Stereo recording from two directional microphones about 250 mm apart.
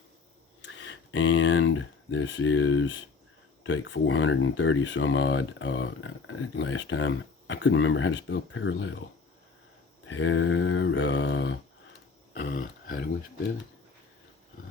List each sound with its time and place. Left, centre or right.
0.6 s speech: left
10.1 s speech: left
12.3 s a sound: left